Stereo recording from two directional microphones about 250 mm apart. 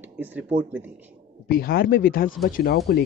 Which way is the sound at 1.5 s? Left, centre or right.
Left.